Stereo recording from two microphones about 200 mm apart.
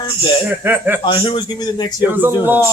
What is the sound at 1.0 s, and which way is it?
Speech, 20° left (ahead or behind).